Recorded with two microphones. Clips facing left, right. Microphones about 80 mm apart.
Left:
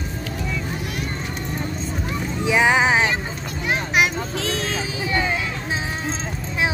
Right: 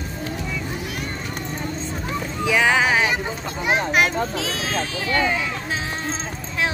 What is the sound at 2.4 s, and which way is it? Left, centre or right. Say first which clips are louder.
Boat: left 1 dB; left.